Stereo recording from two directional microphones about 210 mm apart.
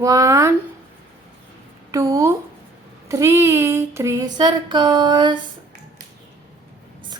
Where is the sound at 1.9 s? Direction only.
15° right (ahead or behind).